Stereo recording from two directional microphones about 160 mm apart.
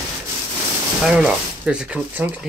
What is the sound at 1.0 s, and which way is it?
Speech, 5° right (ahead or behind).